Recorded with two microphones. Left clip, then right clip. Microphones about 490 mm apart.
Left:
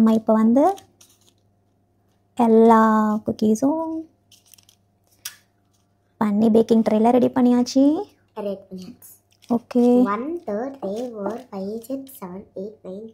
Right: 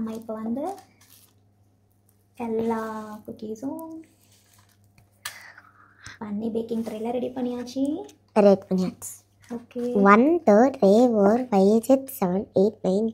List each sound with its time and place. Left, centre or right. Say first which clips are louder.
0.0 s a woman's voice: left 15 dB; left
2.3 s a woman's voice: left 13 dB; left
6.2 s a woman's voice: left 12 dB; left
8.3 s a woman's voice: right 11 dB; right
10.0 s speech: right 9 dB; right